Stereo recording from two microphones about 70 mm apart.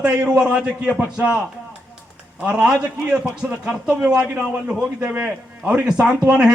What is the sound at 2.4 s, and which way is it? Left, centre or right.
A man's voice, centre.